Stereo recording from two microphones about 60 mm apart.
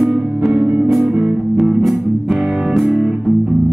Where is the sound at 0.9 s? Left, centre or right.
Centre.